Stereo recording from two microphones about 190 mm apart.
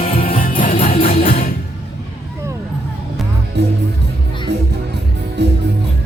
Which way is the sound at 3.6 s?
60° right (ahead or behind).